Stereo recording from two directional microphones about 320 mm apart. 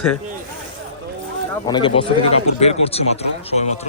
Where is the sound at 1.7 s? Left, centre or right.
Centre.